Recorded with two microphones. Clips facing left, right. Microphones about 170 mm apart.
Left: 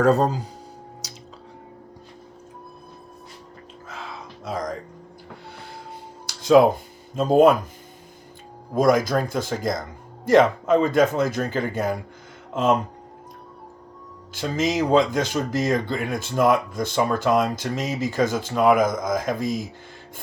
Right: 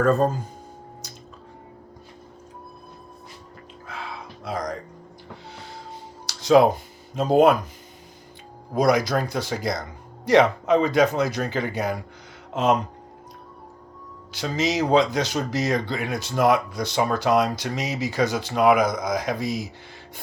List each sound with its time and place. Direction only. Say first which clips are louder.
0.0 s speech: left 1 dB; 80° left
1.0 s music: left 1 dB; 80° left
4.4 s music: even; 45° left (ahead or behind)
6.2 s music: left 1 dB; 50° left (ahead or behind)
7.2 s speech: left 1 dB; 50° left (ahead or behind)
8.7 s speech: left 1 dB; 45° left (ahead or behind)
14.3 s speech: left 1 dB; 50° left (ahead or behind)